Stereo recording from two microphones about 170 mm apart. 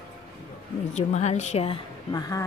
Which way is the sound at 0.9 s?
40° left (ahead or behind).